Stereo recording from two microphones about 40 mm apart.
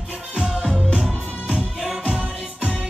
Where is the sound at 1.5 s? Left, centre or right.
Centre.